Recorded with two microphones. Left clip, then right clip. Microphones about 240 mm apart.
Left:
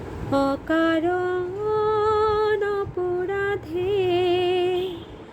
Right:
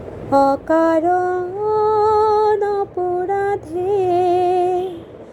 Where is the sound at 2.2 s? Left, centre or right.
Centre.